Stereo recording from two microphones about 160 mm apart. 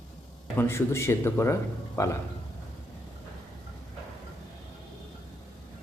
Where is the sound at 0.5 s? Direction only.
15° left (ahead or behind).